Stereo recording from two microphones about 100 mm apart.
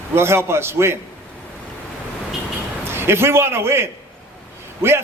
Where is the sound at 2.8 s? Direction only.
25° right (ahead or behind).